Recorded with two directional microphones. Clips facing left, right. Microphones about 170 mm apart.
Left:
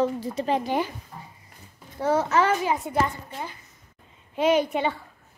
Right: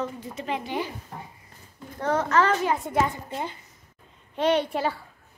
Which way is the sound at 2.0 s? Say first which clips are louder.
Left 1 dB; 10° left (ahead or behind).